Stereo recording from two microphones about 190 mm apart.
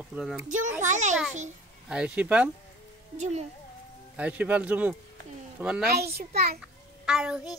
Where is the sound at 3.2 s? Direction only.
35° right (ahead or behind).